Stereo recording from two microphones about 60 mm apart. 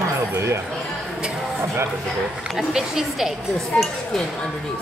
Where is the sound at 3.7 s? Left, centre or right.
Left.